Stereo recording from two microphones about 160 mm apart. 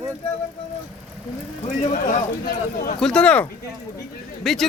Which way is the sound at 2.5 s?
65° left (ahead or behind).